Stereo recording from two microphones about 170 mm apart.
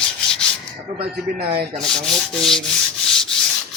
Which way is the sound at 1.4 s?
65° right (ahead or behind).